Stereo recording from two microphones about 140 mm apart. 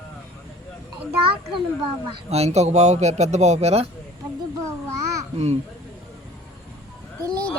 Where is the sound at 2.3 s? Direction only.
50° right (ahead or behind).